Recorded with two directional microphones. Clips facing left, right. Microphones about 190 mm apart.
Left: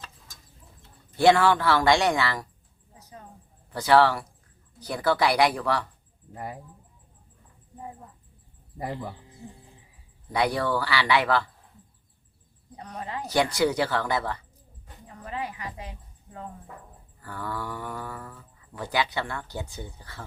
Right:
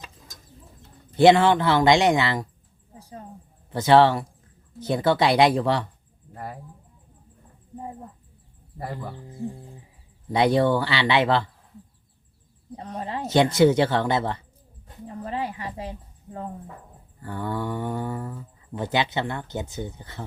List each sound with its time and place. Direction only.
1.1 s speech: 20° right (ahead or behind)
2.9 s a sound: 30° right (ahead or behind)
3.7 s speech: 25° right (ahead or behind)
6.3 s speech: 15° left (ahead or behind)
8.8 s speech: 15° left (ahead or behind)
10.3 s speech: 25° right (ahead or behind)
12.7 s speech: 30° right (ahead or behind)
15.0 s a sound: 30° right (ahead or behind)
17.2 s speech: 25° right (ahead or behind)